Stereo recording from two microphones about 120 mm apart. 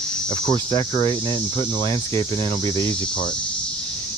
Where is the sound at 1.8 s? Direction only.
30° left (ahead or behind).